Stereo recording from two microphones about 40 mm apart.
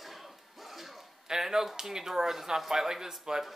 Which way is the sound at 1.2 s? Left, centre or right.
Centre.